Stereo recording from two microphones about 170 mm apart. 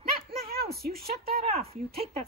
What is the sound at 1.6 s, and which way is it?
Speech, 35° right (ahead or behind).